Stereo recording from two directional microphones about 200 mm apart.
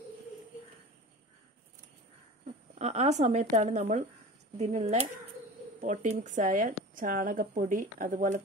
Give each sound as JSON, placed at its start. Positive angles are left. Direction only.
{"t": 2.4, "sound": "speech", "side_deg": -35}